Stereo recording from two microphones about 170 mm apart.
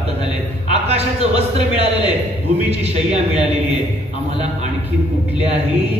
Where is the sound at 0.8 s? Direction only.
40° right (ahead or behind).